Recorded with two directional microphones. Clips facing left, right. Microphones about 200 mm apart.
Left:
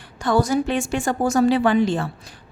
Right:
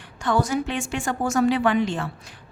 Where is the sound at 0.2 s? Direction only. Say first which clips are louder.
Left 4 dB; 35° left (ahead or behind).